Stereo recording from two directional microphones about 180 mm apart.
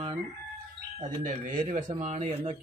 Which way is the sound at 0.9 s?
45° right (ahead or behind).